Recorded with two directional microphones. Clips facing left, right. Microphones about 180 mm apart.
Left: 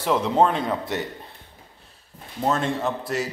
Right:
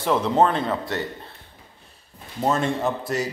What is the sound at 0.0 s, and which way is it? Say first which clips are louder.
Speech: even; 5° left (ahead or behind).